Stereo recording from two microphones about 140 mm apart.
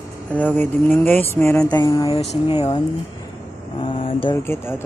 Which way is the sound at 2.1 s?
40° left (ahead or behind).